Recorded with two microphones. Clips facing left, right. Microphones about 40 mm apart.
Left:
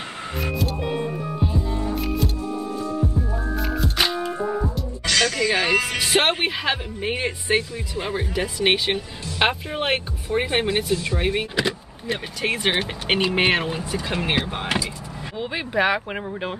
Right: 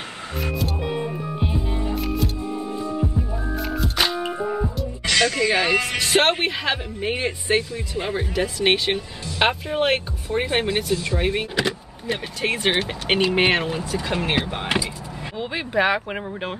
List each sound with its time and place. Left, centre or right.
0.4 s music: centre
1.4 s music: right
2.0 s music: centre
2.4 s music: right
3.5 s music: centre
5.0 s music: centre
5.5 s speech: centre